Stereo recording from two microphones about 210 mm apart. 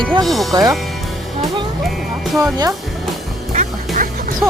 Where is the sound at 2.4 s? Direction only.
15° right (ahead or behind).